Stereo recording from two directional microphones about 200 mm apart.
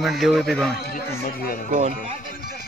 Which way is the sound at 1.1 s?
50° left (ahead or behind).